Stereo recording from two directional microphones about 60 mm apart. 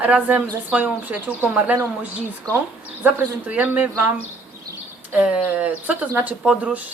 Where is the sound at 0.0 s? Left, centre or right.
Right.